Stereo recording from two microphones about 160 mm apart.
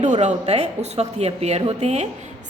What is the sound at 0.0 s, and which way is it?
A woman's voice, 50° right (ahead or behind).